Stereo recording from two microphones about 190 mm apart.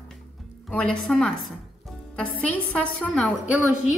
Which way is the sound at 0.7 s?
5° left (ahead or behind).